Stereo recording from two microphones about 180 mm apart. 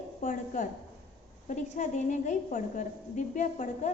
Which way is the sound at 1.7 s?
45° left (ahead or behind).